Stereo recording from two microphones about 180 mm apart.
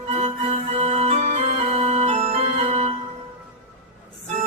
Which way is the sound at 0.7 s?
35° right (ahead or behind).